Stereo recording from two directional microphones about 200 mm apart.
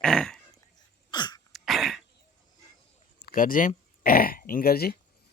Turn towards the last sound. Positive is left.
turn(degrees=50)  # may be behind; listen again after turning